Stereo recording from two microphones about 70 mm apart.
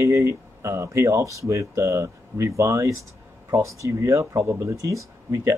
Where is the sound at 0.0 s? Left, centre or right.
Right.